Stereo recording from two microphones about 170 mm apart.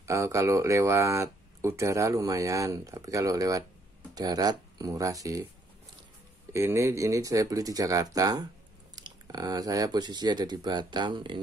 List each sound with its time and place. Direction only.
0.0 s speech: 15° right (ahead or behind)
6.5 s speech: 15° right (ahead or behind)